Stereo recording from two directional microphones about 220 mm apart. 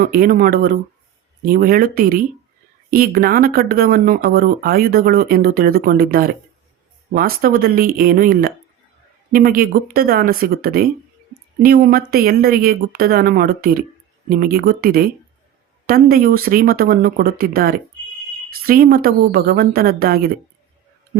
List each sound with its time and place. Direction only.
0.0 s a woman's voice: 40° right (ahead or behind)